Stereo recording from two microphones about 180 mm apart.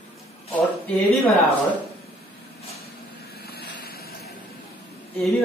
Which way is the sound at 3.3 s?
60° left (ahead or behind).